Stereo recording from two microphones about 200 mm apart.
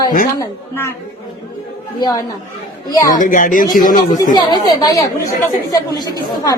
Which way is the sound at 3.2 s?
40° left (ahead or behind).